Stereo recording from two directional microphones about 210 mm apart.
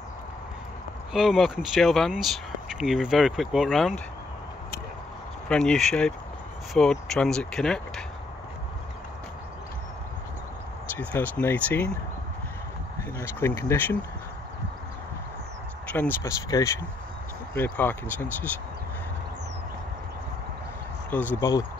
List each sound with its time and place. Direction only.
1.1 s speech: centre (ahead or behind)
5.5 s speech: 5° left (ahead or behind)
11.0 s speech: 5° left (ahead or behind)
13.2 s speech: 10° left (ahead or behind)
15.9 s speech: 10° left (ahead or behind)
21.1 s speech: 10° left (ahead or behind)